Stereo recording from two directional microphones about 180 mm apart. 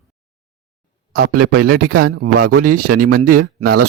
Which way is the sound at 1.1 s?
55° right (ahead or behind).